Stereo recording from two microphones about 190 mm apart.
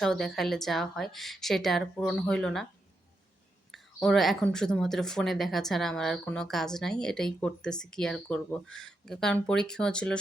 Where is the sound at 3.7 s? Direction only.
Centre (ahead or behind).